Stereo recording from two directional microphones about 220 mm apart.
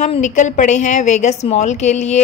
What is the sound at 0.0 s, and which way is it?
A woman's voice, 35° left (ahead or behind).